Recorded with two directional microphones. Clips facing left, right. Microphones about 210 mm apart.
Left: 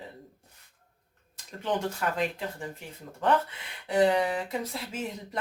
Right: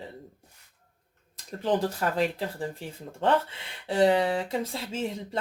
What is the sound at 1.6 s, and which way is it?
Speech, 35° right (ahead or behind).